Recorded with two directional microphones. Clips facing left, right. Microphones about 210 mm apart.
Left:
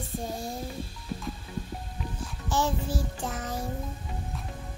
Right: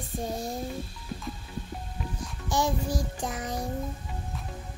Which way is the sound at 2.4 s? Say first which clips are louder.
Right 1 dB; 15° right (ahead or behind).